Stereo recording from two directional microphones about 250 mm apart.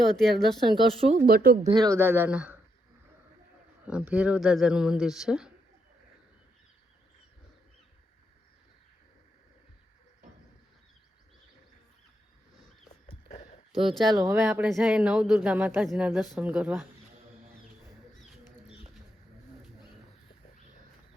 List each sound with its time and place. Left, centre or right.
0.0 s speech: centre
1.0 s speech: right
1.3 s speech: right
1.7 s speech: centre
3.8 s speech: centre
14.0 s speech: centre